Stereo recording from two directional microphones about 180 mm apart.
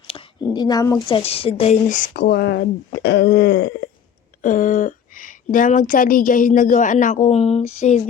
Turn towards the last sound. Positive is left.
turn(degrees=40)  # may be behind; listen again after turning